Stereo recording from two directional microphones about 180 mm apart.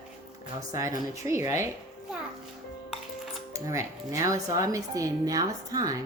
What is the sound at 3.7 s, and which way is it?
Speech, 15° right (ahead or behind).